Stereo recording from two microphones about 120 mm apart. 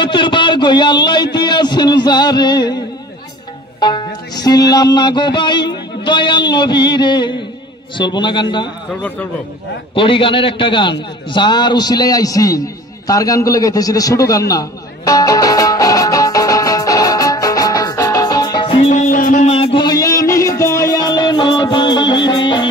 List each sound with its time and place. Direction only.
0.0 s music: 40° left (ahead or behind)
3.8 s music: 35° left (ahead or behind)
9.9 s a sound: 45° left (ahead or behind)
18.9 s music: 80° left
19.6 s music: 40° left (ahead or behind)